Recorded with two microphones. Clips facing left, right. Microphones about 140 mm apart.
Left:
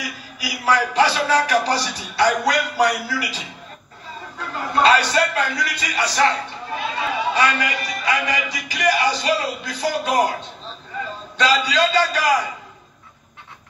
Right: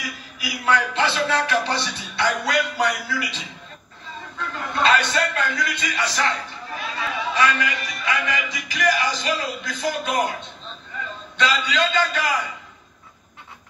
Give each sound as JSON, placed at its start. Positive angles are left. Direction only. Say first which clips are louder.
{"t": 0.4, "sound": "a man's voice", "louder": "left 2 dB", "side_deg": 35}
{"t": 11.3, "sound": "a man's voice", "louder": "left 3 dB", "side_deg": 35}